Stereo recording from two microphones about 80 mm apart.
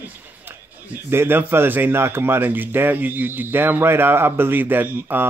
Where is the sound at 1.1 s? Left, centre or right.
Right.